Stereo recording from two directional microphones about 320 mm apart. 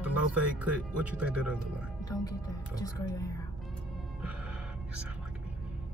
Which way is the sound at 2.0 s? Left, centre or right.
Centre.